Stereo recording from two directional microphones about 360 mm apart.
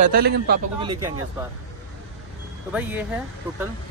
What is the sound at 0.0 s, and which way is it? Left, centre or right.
Speech, right.